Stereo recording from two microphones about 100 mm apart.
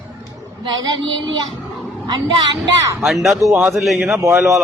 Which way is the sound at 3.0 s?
Centre (ahead or behind).